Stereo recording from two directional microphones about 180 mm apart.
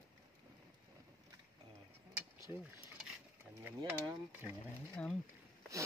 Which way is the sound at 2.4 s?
5° right (ahead or behind).